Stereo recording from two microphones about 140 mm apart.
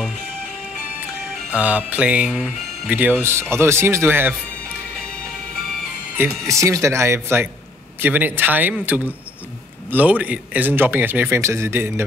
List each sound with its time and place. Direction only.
1.5 s speech: 10° right (ahead or behind)
6.1 s speech: 20° right (ahead or behind)